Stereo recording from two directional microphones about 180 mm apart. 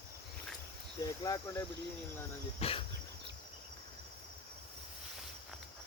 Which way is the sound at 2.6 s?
35° left (ahead or behind).